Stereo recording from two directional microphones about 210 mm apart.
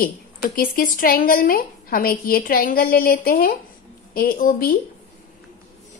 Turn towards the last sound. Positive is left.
turn(degrees=40)  # may be behind; listen again after turning